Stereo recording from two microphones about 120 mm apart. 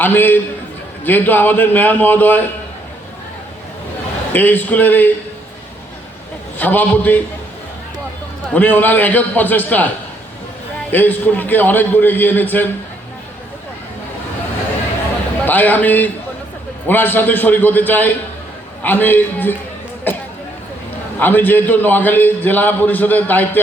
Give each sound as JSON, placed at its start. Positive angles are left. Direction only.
{"t": 0.0, "sound": "a man's voice", "side_deg": 15}
{"t": 4.3, "sound": "a man's voice", "side_deg": 15}
{"t": 6.6, "sound": "a man's voice", "side_deg": 15}
{"t": 8.5, "sound": "a man's voice", "side_deg": 15}
{"t": 10.9, "sound": "a man's voice", "side_deg": 15}
{"t": 15.4, "sound": "a man's voice", "side_deg": 15}